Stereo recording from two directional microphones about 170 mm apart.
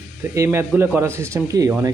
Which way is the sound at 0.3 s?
15° right (ahead or behind).